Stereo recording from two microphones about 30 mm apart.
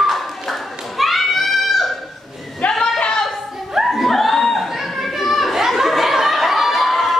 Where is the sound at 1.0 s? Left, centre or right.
Centre.